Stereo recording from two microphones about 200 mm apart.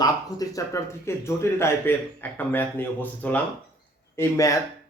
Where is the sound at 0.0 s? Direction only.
15° left (ahead or behind).